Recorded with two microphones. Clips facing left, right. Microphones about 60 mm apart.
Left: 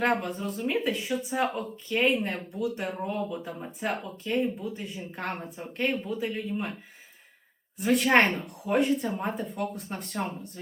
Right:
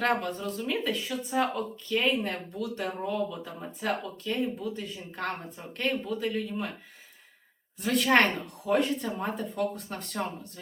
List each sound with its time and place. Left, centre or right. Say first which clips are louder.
0.0 s speech: left 1 dB; centre
7.8 s speech: left 1 dB; centre